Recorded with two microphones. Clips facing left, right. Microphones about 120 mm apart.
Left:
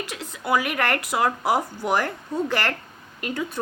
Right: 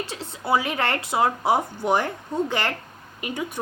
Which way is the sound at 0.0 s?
30° right (ahead or behind).